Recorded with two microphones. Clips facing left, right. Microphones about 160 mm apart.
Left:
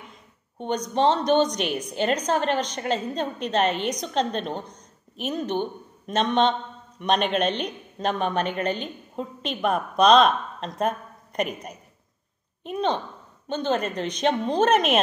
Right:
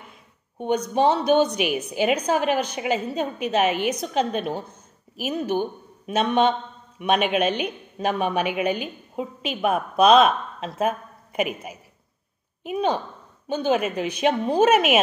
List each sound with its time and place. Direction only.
0.6 s a woman's voice: 10° right (ahead or behind)